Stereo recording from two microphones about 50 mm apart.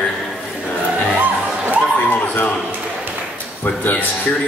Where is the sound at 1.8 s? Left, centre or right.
Left.